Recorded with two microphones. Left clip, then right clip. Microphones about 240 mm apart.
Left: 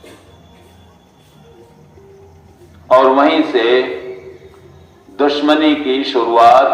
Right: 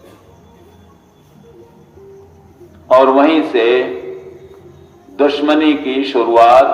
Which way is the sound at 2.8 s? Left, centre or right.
Right.